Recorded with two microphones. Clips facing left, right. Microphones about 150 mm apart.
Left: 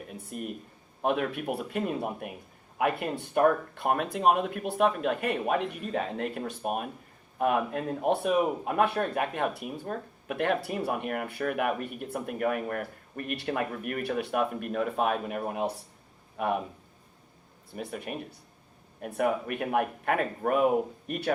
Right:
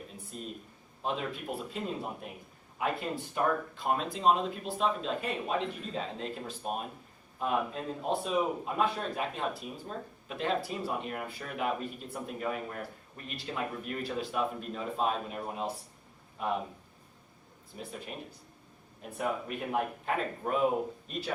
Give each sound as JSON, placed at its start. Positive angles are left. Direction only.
{"t": 0.1, "sound": "speech", "side_deg": 60}
{"t": 17.7, "sound": "speech", "side_deg": 60}